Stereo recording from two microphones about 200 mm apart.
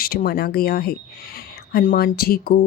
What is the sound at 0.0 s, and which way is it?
Speech, 50° left (ahead or behind).